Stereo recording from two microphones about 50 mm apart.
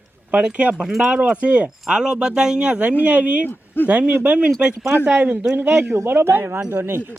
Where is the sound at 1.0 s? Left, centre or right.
Right.